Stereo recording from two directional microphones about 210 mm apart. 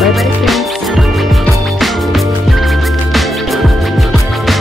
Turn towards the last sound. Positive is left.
turn(degrees=0)  # may be behind; listen again after turning